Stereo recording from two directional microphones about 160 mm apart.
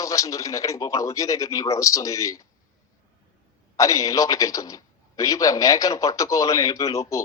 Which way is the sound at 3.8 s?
20° left (ahead or behind).